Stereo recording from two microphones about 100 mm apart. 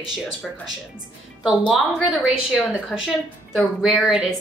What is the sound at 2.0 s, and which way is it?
A woman's voice, 5° right (ahead or behind).